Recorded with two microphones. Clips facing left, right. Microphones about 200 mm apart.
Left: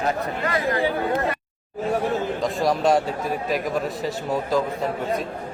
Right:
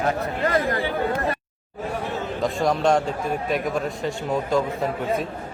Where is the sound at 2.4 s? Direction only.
Centre (ahead or behind).